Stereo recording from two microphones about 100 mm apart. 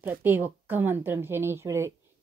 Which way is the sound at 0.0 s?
20° right (ahead or behind).